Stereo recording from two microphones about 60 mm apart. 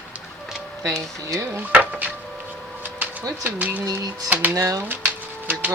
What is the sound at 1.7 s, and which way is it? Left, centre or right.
Music, right.